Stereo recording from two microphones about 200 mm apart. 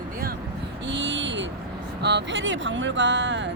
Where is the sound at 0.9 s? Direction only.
65° right (ahead or behind).